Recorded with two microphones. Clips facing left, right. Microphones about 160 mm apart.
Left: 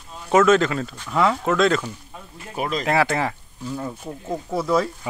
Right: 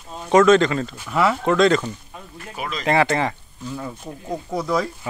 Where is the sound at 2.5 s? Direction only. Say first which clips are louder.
Left 5 dB; 40° left (ahead or behind).